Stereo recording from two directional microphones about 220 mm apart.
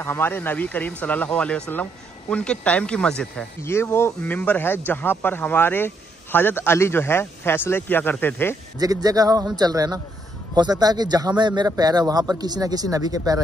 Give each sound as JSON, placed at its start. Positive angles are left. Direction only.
{"t": 0.0, "sound": "speech", "side_deg": 10}
{"t": 8.7, "sound": "speech", "side_deg": -15}